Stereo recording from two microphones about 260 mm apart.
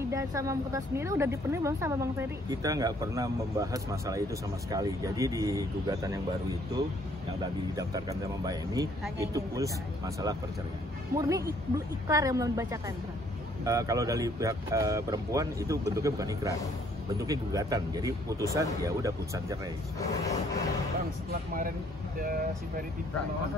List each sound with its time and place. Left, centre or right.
0.1 s speech: centre
7.7 s speech: centre
20.0 s a sound: centre
21.3 s speech: right